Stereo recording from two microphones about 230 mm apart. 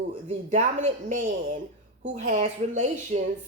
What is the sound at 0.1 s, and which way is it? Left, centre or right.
A woman's voice, right.